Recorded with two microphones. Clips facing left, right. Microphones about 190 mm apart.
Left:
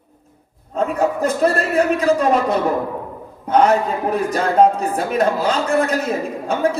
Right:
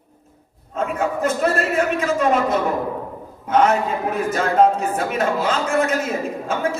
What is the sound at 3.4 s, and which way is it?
A man's voice, 35° left (ahead or behind).